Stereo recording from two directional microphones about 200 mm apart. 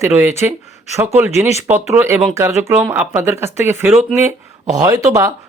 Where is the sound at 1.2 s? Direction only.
15° right (ahead or behind).